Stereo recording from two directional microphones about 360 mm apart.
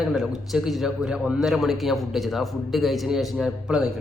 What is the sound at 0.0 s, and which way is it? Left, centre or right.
A man's voice, centre.